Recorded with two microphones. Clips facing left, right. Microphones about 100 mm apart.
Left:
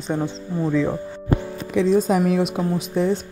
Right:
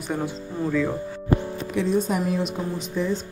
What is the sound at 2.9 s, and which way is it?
Speech, 60° left (ahead or behind).